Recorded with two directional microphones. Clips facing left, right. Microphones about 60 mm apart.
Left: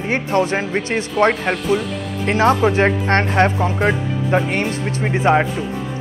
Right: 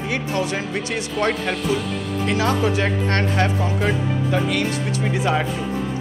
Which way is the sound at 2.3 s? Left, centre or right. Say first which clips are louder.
Left 6 dB; left.